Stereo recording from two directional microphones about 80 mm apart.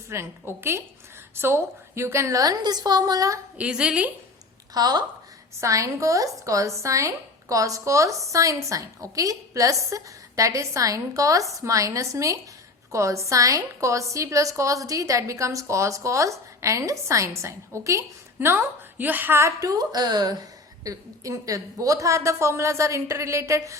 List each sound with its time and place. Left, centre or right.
0.1 s a woman's voice: right
2.4 s a woman's voice: right
3.6 s a woman's voice: centre
4.7 s speech: right
5.5 s a woman's voice: right
18.3 s a woman's voice: right